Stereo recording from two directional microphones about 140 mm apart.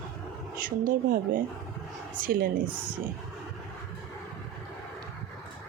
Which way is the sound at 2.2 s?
90° right.